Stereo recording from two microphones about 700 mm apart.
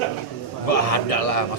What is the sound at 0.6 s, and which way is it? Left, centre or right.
Speech, left.